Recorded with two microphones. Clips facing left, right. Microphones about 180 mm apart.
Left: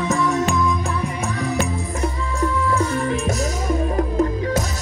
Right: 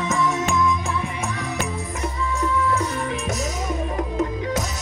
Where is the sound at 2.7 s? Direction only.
Centre (ahead or behind).